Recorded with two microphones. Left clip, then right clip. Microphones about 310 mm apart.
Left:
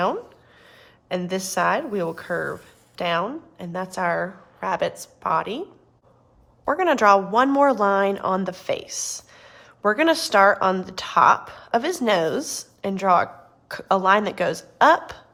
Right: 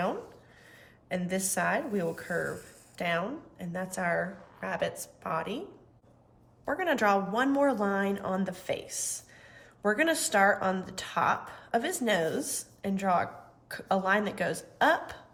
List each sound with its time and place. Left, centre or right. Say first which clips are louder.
0.8 s a woman's voice: left 7 dB; centre
6.7 s a woman's voice: left 10 dB; centre